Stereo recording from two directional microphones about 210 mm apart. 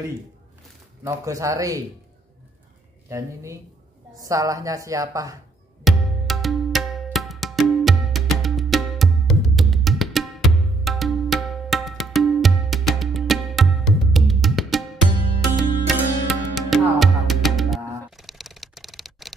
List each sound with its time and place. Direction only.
1.0 s a woman's voice: 15° right (ahead or behind)
3.1 s a woman's voice: 15° right (ahead or behind)
5.9 s music: centre (ahead or behind)